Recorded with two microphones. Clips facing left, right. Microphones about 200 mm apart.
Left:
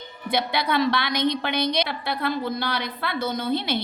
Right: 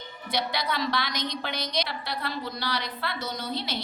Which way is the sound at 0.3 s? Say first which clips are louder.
Left 5 dB; 55° left (ahead or behind).